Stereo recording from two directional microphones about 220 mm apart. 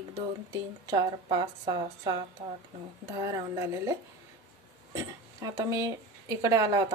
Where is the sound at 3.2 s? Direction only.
15° right (ahead or behind).